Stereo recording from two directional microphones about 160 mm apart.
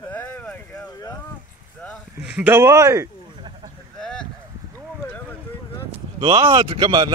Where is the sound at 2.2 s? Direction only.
10° right (ahead or behind).